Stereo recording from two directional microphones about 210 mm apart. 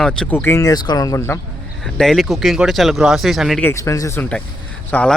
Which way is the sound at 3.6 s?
15° left (ahead or behind).